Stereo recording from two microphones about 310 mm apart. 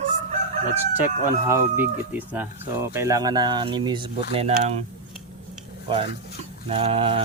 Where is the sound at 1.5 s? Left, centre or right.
Centre.